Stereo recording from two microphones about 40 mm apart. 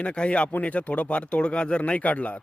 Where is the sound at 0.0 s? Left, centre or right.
Left.